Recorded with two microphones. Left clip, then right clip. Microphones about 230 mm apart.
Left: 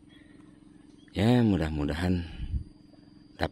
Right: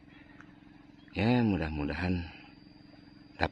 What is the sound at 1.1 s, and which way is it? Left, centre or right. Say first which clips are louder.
A man's voice: left 3 dB; centre.